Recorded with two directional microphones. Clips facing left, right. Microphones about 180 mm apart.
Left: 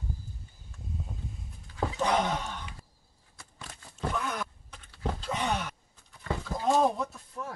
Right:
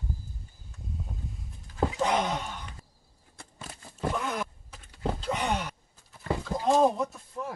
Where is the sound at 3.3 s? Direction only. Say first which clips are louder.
Right 3 dB; 30° right (ahead or behind).